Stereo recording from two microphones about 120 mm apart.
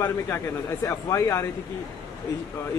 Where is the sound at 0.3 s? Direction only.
25° left (ahead or behind).